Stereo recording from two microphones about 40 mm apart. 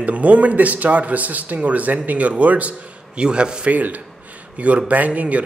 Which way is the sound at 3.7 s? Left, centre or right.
Right.